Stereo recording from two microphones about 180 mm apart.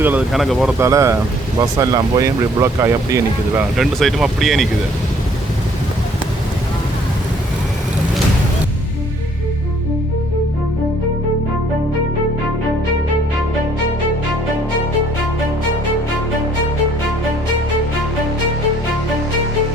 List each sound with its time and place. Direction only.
0.0 s speech: 10° right (ahead or behind)
0.8 s speech: 15° right (ahead or behind)
3.8 s speech: centre (ahead or behind)